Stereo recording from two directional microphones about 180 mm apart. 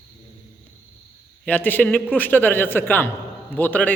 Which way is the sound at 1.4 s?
10° left (ahead or behind).